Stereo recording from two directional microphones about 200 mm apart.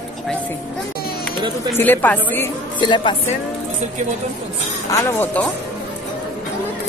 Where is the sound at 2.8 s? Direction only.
25° left (ahead or behind).